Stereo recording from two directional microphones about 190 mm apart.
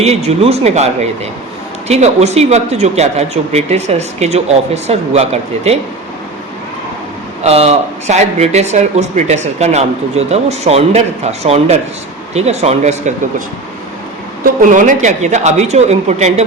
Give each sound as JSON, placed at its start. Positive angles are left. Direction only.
{"t": 0.0, "sound": "speech", "side_deg": -35}
{"t": 1.9, "sound": "speech", "side_deg": -35}
{"t": 7.4, "sound": "speech", "side_deg": -35}
{"t": 14.4, "sound": "speech", "side_deg": -45}